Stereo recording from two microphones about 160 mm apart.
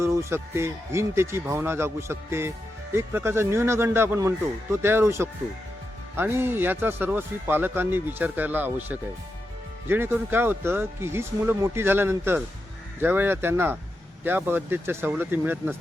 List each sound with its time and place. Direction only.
0.0 s speech: 15° right (ahead or behind)